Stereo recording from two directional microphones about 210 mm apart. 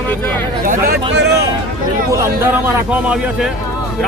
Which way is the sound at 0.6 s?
45° right (ahead or behind).